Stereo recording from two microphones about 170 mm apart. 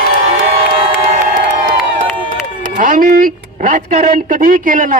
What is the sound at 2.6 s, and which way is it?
A man's voice, 55° right (ahead or behind).